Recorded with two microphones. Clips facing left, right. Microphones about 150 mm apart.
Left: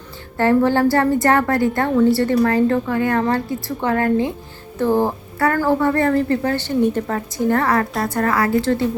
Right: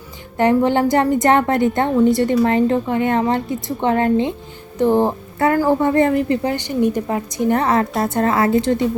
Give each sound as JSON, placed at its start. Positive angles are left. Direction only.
{"t": 0.3, "sound": "a woman's voice", "side_deg": -20}